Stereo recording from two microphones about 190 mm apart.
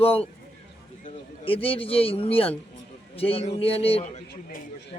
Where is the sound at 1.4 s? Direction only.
30° left (ahead or behind).